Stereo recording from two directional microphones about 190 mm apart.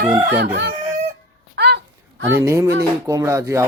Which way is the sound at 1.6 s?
60° right (ahead or behind).